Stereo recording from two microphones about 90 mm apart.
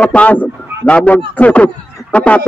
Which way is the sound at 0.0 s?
15° left (ahead or behind).